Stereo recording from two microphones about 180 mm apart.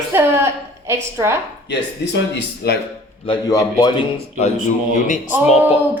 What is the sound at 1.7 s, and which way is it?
Speech, 75° left (ahead or behind).